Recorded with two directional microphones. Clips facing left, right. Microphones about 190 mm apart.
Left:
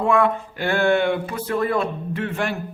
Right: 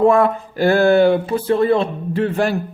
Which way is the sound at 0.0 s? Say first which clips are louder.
Right 5 dB; 40° right (ahead or behind).